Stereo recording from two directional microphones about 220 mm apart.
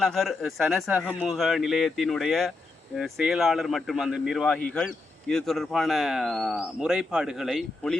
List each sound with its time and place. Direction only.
0.0 s speech: centre (ahead or behind)